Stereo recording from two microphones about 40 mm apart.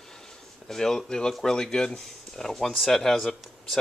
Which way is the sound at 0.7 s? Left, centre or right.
Centre.